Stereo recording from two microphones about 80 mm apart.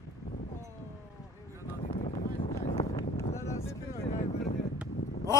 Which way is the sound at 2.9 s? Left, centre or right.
Left.